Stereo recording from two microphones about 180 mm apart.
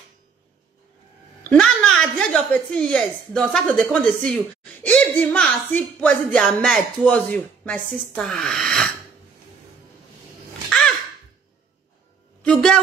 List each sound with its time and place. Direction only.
1.5 s a woman's voice: 5° left (ahead or behind)
10.7 s gasp: centre (ahead or behind)
12.4 s a sound: 5° left (ahead or behind)